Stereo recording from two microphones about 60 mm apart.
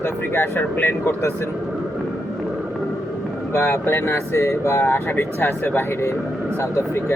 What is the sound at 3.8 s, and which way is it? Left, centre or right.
Speech, left.